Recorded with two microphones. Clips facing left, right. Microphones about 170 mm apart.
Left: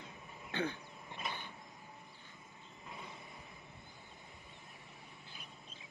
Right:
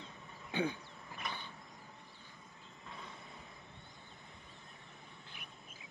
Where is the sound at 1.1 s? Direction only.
20° left (ahead or behind).